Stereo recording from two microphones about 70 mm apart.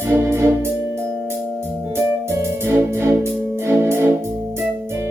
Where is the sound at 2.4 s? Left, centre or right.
Right.